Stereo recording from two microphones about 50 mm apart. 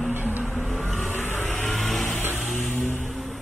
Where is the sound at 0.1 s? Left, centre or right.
Right.